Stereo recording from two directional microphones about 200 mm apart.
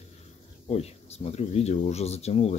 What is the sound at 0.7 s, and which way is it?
Speech, 30° left (ahead or behind).